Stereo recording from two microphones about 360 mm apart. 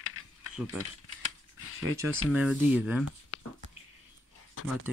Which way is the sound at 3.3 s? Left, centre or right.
Left.